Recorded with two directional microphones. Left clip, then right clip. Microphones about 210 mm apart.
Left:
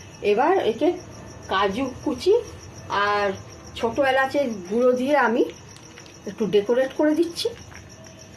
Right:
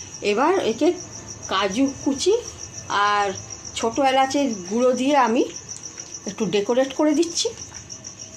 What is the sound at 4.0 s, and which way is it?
A woman's voice, 35° right (ahead or behind).